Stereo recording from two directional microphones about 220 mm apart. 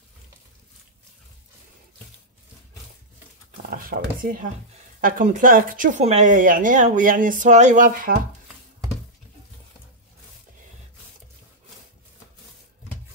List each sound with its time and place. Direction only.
3.7 s speech: 40° right (ahead or behind)